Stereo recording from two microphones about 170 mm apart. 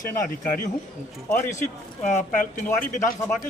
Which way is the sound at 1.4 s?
45° left (ahead or behind).